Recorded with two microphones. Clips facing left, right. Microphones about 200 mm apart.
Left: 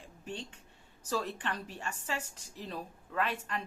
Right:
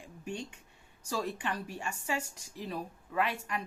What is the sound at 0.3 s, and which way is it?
Speech, 10° right (ahead or behind).